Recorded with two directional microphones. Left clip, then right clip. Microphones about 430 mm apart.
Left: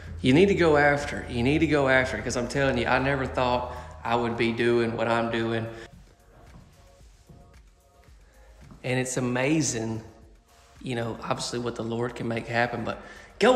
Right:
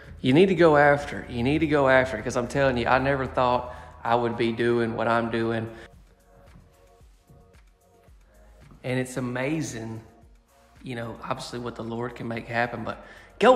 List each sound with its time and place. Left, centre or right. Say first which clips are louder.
0.0 s speech: right 1 dB; centre
8.8 s speech: left 1 dB; centre